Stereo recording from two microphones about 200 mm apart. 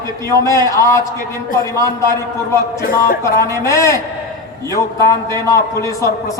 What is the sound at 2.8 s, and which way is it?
Speech, 45° left (ahead or behind).